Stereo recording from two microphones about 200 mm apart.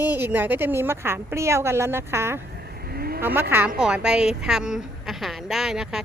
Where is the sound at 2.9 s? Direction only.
50° right (ahead or behind).